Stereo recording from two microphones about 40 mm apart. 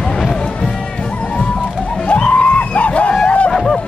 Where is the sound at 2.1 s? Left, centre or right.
Left.